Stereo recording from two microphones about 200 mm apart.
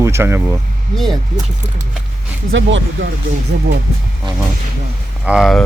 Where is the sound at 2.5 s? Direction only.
70° right (ahead or behind).